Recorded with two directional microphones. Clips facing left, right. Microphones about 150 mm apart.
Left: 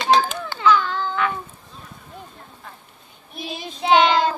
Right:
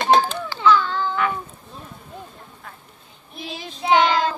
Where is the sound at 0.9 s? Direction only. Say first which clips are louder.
Right 1 dB; 10° right (ahead or behind).